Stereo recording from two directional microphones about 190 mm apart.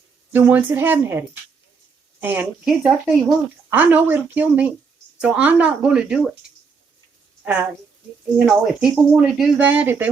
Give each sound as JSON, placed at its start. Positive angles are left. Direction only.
{"t": 0.3, "sound": "speech", "side_deg": -10}
{"t": 7.4, "sound": "a woman's voice", "side_deg": -5}